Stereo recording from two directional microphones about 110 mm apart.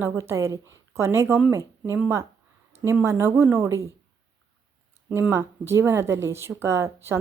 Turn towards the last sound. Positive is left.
turn(degrees=-25)  # may be behind; listen again after turning